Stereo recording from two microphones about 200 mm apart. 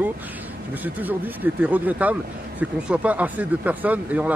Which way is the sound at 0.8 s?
10° right (ahead or behind).